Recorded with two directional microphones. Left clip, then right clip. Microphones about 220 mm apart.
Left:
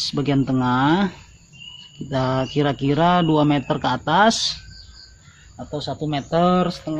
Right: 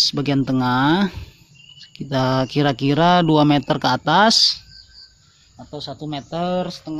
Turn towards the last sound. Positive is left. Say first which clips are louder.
# left 4 dB
turn(degrees=-25)  # may be behind; listen again after turning